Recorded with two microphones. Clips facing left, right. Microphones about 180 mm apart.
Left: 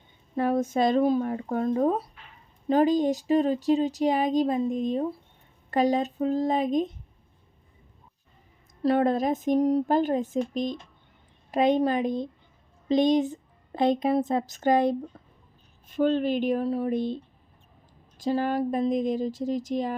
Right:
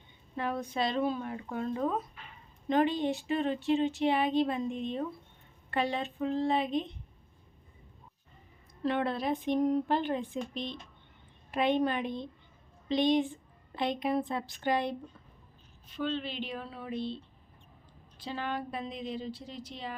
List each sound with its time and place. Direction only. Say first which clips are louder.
0.3 s speech: left 9 dB; 45° left (ahead or behind)
8.8 s a woman's voice: left 8 dB; 40° left (ahead or behind)
15.1 s a sound: left 6 dB; 45° left (ahead or behind)
15.9 s a woman's voice: left 11 dB; 45° left (ahead or behind)
18.2 s a woman's voice: left 11 dB; 40° left (ahead or behind)